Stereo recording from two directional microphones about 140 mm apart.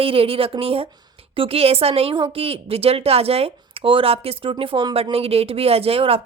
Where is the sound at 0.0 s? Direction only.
40° right (ahead or behind).